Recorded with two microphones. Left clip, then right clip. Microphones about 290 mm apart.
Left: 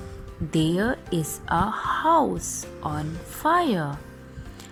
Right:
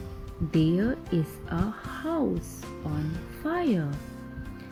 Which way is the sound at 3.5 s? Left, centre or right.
Left.